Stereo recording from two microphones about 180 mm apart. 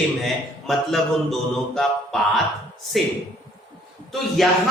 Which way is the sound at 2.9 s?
Centre (ahead or behind).